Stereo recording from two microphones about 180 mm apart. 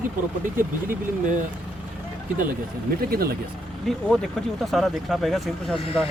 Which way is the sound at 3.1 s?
60° right (ahead or behind).